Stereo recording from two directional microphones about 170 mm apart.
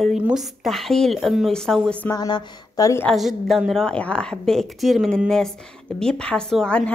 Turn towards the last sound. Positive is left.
turn(degrees=5)  # may be behind; listen again after turning